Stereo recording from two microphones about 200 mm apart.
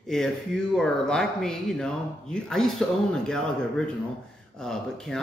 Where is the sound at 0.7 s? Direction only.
5° left (ahead or behind).